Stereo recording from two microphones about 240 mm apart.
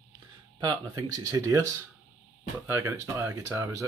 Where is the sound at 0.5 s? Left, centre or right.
Centre.